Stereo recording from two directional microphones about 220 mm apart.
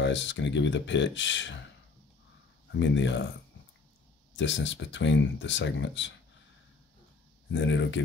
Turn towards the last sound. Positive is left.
turn(degrees=55)  # may be behind; listen again after turning